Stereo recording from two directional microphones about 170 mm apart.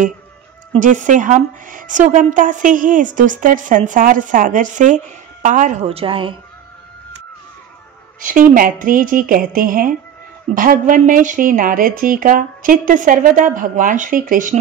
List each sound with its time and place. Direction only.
0.7 s a woman's voice: 50° right (ahead or behind); by 6.3 s 30° right (ahead or behind)
8.2 s a woman's voice: 50° right (ahead or behind)